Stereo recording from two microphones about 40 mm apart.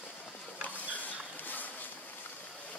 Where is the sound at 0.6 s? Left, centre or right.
Left.